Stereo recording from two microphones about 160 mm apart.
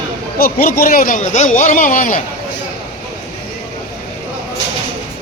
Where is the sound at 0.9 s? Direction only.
55° left (ahead or behind).